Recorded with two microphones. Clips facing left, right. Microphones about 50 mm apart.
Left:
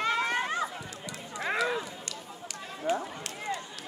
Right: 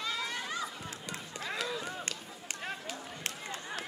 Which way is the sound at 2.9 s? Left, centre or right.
Left.